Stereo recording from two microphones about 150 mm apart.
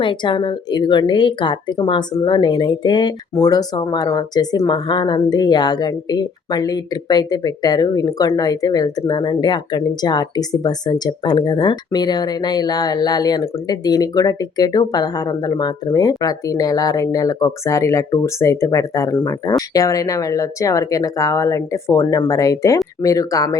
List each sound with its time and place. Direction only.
0.0 s a woman's voice: 35° left (ahead or behind)